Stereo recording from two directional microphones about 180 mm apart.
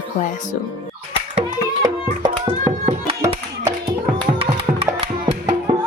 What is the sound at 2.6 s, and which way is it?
Music, 35° right (ahead or behind).